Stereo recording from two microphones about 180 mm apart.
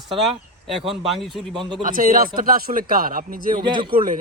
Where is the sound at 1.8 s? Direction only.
50° right (ahead or behind).